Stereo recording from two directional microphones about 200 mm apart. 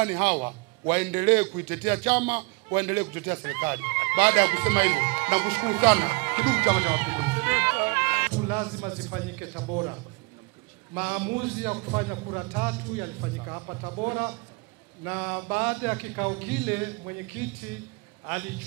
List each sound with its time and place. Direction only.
0.0 s a man's voice: 10° right (ahead or behind)
8.4 s music: 10° right (ahead or behind)
8.7 s a man's voice: 20° right (ahead or behind)
11.0 s a man's voice: 10° right (ahead or behind); by 14.0 s 25° right (ahead or behind)
14.0 s a man's voice: 10° right (ahead or behind)